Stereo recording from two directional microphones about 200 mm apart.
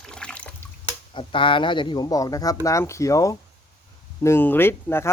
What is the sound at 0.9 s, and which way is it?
Speech, 25° left (ahead or behind).